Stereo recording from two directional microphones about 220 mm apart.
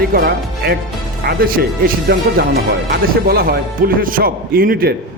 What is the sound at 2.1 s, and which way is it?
Speech, 50° right (ahead or behind).